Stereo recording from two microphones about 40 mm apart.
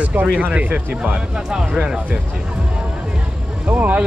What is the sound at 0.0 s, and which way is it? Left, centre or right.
Speech, right.